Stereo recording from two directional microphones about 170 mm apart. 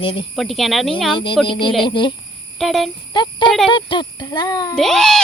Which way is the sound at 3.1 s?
25° left (ahead or behind).